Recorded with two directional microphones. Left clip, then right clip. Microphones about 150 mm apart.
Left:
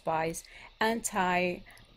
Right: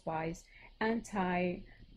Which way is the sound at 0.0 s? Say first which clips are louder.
Left 7 dB; 15° left (ahead or behind).